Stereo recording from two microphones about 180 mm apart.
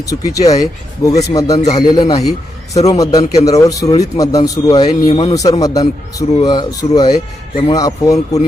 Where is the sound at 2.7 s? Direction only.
35° left (ahead or behind).